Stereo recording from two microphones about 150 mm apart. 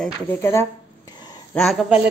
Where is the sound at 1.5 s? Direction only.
Centre (ahead or behind).